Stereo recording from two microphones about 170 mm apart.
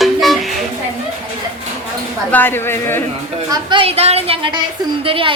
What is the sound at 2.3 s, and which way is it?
Speech, 10° left (ahead or behind).